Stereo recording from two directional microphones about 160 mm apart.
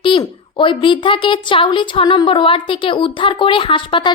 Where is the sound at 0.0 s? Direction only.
30° left (ahead or behind).